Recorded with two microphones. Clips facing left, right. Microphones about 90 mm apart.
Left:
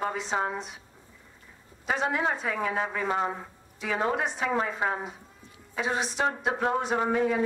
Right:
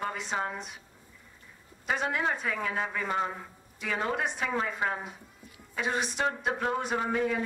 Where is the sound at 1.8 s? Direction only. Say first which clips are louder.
Left 2 dB; centre (ahead or behind).